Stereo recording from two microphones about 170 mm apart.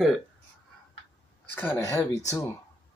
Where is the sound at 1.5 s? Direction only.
15° left (ahead or behind).